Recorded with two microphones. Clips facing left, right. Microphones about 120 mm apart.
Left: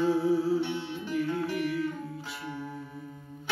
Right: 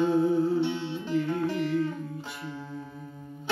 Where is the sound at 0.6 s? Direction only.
20° right (ahead or behind).